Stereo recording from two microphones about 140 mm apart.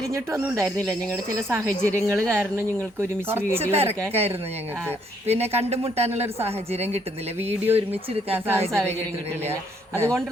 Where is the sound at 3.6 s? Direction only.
45° right (ahead or behind).